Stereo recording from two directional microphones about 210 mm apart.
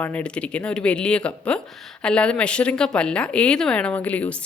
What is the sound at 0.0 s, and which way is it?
Speech, 5° left (ahead or behind).